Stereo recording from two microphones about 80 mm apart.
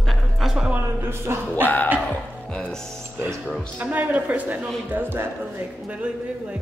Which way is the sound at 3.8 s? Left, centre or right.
Centre.